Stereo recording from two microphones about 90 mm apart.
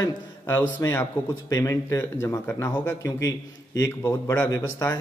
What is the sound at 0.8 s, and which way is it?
A man's voice, 30° left (ahead or behind).